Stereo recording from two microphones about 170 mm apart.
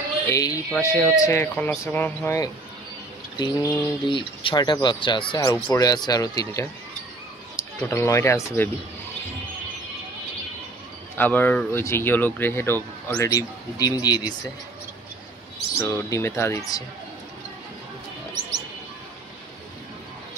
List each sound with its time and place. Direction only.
0.3 s speech: 20° left (ahead or behind)
11.1 s speech: 10° left (ahead or behind)
15.8 s speech: 15° left (ahead or behind)